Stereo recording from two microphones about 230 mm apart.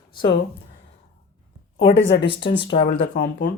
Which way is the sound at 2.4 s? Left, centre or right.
Left.